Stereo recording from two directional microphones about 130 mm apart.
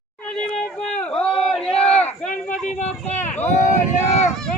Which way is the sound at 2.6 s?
60° left (ahead or behind).